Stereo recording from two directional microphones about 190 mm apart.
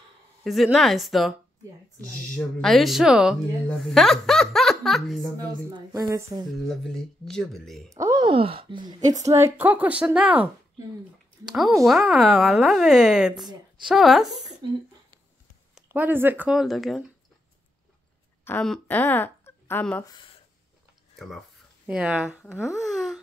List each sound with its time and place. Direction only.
0.4 s speech: centre (ahead or behind)
2.3 s speech: centre (ahead or behind)
5.7 s speech: 20° right (ahead or behind)
6.7 s speech: 5° left (ahead or behind)
7.9 s a woman's voice: 20° right (ahead or behind); by 14.2 s centre (ahead or behind)
15.7 s speech: 10° right (ahead or behind)
18.4 s speech: 5° left (ahead or behind)
20.1 s speech: 25° left (ahead or behind)
21.8 s speech: 5° right (ahead or behind)
22.5 s speech: 15° left (ahead or behind)
22.8 s a sound: centre (ahead or behind)